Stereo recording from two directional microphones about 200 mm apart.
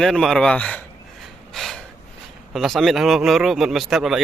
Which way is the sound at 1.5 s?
Centre (ahead or behind).